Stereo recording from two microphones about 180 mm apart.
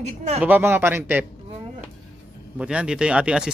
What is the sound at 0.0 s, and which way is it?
Speech, 40° right (ahead or behind).